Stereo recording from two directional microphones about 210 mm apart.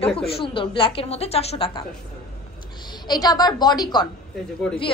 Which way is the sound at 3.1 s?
20° left (ahead or behind).